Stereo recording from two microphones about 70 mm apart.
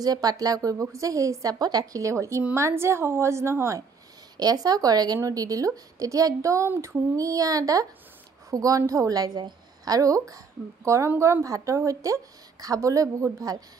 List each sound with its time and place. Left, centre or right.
0.0 s a woman's voice: right
4.4 s speech: right
5.2 s a woman's voice: right
6.7 s a woman's voice: right
7.2 s a woman's voice: right